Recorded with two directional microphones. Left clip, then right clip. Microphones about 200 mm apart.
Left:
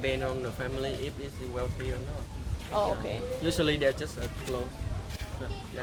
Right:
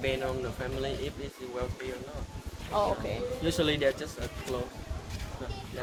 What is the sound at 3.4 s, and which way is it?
Speech, 15° left (ahead or behind).